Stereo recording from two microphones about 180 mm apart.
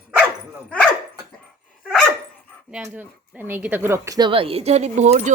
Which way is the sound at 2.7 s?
5° right (ahead or behind).